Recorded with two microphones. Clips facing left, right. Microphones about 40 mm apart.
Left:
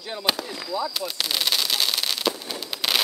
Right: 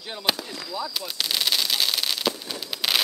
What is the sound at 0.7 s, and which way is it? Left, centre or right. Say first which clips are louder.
Fireworks: left 4 dB; centre.